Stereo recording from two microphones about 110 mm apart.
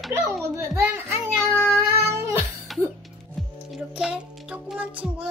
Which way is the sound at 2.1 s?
20° right (ahead or behind).